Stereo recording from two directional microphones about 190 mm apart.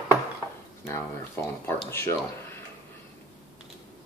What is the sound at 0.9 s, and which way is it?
Speech, 15° left (ahead or behind).